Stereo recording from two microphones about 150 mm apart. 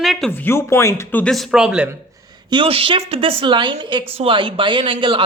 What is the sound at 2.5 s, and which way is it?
Speech, 35° right (ahead or behind).